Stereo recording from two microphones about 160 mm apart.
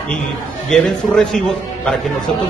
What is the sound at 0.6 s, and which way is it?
A man's voice, 5° left (ahead or behind).